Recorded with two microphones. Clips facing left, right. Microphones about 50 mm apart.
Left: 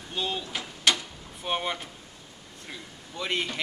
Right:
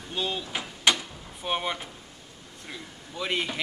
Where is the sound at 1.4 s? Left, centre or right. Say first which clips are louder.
Even; centre.